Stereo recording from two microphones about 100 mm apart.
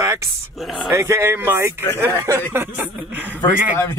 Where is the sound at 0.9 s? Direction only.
25° right (ahead or behind).